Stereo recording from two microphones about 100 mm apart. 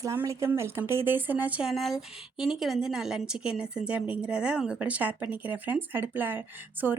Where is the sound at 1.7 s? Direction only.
Centre (ahead or behind).